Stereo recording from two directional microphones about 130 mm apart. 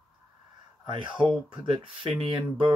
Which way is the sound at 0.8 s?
40° right (ahead or behind).